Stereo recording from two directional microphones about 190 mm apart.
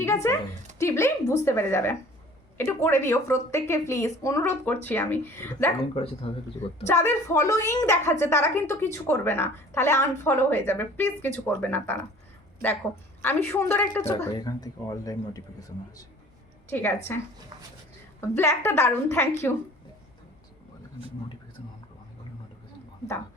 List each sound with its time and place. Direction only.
0.0 s a woman's voice: 15° left (ahead or behind)
5.9 s speech: 30° left (ahead or behind)
6.8 s a woman's voice: 15° left (ahead or behind)
13.2 s a woman's voice: 10° left (ahead or behind)